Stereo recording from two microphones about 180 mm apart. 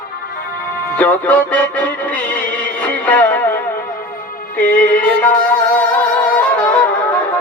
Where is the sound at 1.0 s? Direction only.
10° left (ahead or behind).